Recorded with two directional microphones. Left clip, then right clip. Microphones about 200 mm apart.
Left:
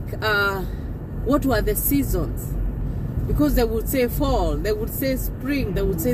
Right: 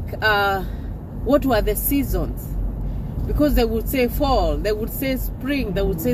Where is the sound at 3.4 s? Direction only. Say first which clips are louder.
Right 2 dB; 10° left (ahead or behind).